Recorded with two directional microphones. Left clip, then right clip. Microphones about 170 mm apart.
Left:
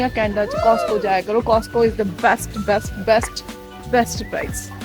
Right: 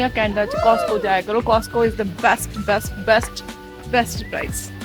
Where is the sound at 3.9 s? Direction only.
15° left (ahead or behind).